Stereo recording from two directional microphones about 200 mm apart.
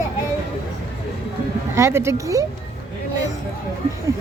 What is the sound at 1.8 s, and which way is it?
Speech, 15° right (ahead or behind).